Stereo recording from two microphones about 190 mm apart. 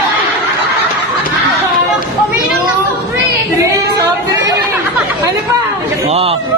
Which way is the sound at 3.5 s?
15° right (ahead or behind).